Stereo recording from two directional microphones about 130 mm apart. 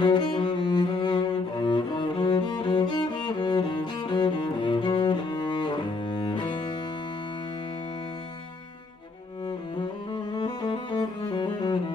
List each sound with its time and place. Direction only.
0.0 s cello: 35° left (ahead or behind)
9.8 s music: 35° left (ahead or behind)